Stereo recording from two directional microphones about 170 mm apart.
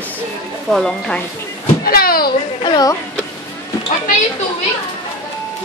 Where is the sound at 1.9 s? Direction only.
60° left (ahead or behind).